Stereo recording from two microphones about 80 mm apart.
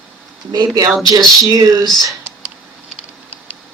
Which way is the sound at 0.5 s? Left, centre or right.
Right.